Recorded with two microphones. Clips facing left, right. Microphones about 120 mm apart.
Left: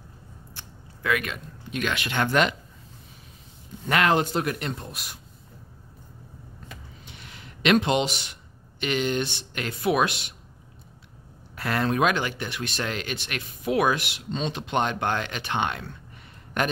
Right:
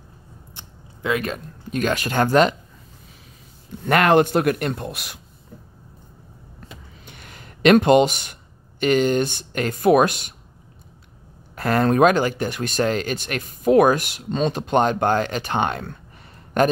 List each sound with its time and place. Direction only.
0.6 s a sound: 25° right (ahead or behind)
1.2 s speech: 40° right (ahead or behind)
3.9 s a man's voice: 55° right (ahead or behind); by 5.2 s 75° right (ahead or behind)
7.1 s speech: 50° right (ahead or behind)
11.5 s speech: 45° right (ahead or behind)